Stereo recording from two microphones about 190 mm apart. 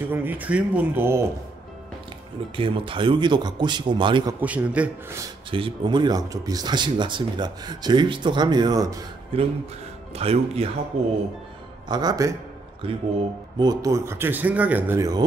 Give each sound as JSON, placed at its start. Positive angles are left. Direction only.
{"t": 0.0, "sound": "a man's voice", "side_deg": -10}
{"t": 2.5, "sound": "speech", "side_deg": -25}
{"t": 4.4, "sound": "a man's voice", "side_deg": -10}
{"t": 5.5, "sound": "speech", "side_deg": -25}
{"t": 9.3, "sound": "speech", "side_deg": -30}
{"t": 11.9, "sound": "speech", "side_deg": -20}
{"t": 13.6, "sound": "a man's voice", "side_deg": -20}